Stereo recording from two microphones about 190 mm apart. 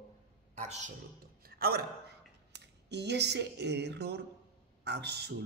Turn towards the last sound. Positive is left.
turn(degrees=-60)  # may be behind; listen again after turning